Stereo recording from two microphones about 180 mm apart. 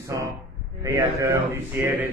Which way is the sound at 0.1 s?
20° right (ahead or behind).